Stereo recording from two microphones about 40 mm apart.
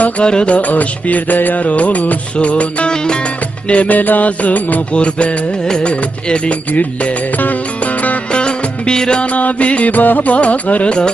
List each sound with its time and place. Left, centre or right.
0.3 s music: left
0.5 s music: left
2.9 s music: centre
3.7 s music: left
4.9 s music: left
5.8 s music: left
8.3 s music: left
9.2 s music: left